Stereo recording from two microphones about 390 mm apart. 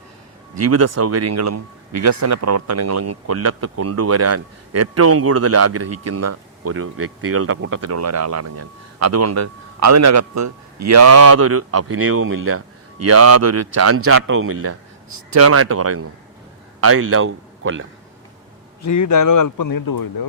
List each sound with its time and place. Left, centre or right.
0.5 s a man's voice: right
18.9 s speech: left